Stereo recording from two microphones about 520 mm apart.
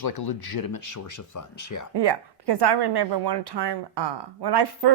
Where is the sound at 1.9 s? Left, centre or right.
Right.